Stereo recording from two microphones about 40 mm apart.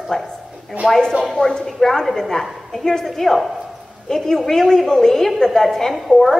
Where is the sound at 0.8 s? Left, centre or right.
Right.